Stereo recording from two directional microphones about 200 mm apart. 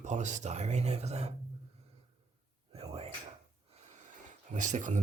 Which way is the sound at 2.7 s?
30° right (ahead or behind).